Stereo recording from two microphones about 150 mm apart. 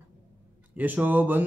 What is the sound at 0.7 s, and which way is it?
Speech, 10° right (ahead or behind).